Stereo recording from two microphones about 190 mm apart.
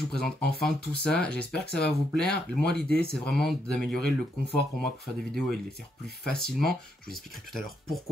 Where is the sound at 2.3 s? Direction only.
60° left (ahead or behind).